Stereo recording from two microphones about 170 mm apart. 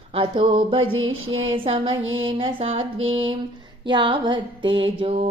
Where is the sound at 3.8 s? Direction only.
30° right (ahead or behind).